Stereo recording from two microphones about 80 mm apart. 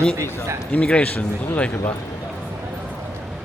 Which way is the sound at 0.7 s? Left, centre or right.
Centre.